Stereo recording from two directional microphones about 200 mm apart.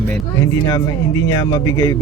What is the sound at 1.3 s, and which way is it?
Speech, 20° left (ahead or behind).